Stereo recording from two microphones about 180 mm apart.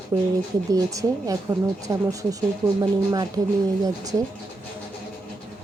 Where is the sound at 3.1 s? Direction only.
25° right (ahead or behind).